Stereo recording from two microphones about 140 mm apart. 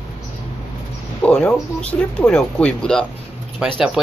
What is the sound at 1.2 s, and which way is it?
Speech, 10° left (ahead or behind).